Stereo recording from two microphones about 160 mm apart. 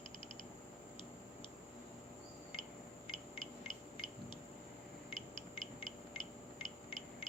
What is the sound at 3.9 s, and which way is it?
Owl, 30° left (ahead or behind).